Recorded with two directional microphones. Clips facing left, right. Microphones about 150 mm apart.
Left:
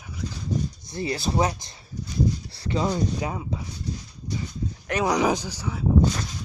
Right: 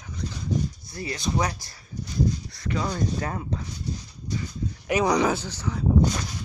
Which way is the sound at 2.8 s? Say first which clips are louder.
Left 3 dB; 15° left (ahead or behind).